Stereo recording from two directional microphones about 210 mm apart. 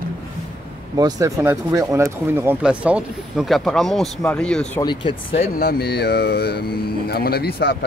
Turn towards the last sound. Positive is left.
turn(degrees=50)  # may be behind; listen again after turning